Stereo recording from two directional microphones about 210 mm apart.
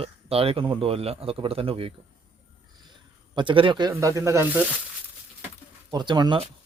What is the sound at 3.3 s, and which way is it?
Speech, 25° right (ahead or behind).